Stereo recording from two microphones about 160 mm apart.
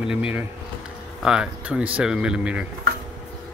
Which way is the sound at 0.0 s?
5° right (ahead or behind).